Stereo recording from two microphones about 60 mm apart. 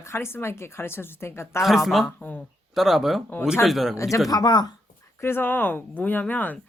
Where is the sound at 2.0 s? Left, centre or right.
Left.